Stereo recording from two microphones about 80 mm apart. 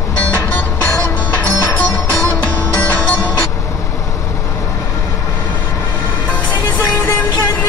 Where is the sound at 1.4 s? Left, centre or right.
Centre.